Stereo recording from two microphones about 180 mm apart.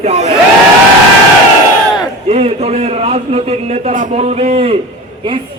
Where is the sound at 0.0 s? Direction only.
35° right (ahead or behind).